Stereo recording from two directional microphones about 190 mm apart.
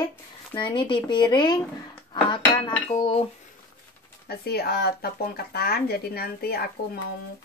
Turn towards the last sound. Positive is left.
turn(degrees=55)  # may be behind; listen again after turning